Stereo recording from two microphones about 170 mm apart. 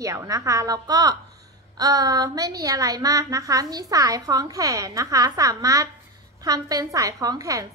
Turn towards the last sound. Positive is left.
turn(degrees=-20)  # may be behind; listen again after turning